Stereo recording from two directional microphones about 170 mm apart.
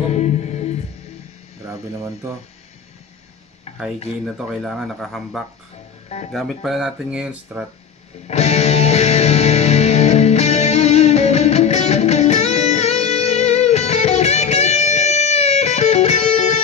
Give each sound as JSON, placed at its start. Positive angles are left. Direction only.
{"t": 0.1, "sound": "music", "side_deg": 40}
{"t": 1.7, "sound": "speech", "side_deg": -15}
{"t": 4.2, "sound": "speech", "side_deg": 0}
{"t": 8.3, "sound": "music", "side_deg": 40}